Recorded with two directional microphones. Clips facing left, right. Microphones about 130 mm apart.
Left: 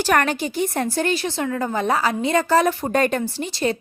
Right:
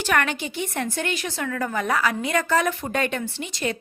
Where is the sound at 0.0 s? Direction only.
40° left (ahead or behind).